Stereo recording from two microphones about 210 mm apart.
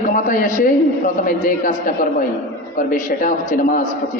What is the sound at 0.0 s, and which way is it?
A man's voice, 40° left (ahead or behind).